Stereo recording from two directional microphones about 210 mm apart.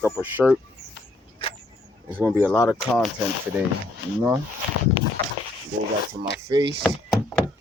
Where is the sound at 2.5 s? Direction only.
10° left (ahead or behind).